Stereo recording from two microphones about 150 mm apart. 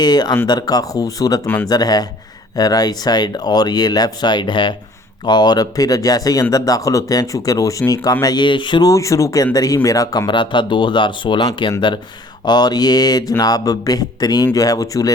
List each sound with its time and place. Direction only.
0.0 s speech: 25° left (ahead or behind)